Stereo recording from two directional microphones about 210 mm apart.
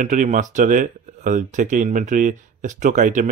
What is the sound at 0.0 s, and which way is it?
Speech, 35° right (ahead or behind).